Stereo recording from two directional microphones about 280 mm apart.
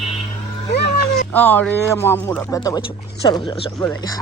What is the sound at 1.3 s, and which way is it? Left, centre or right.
Speech, centre.